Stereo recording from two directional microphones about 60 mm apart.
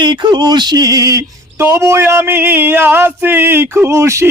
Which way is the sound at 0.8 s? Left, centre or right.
Right.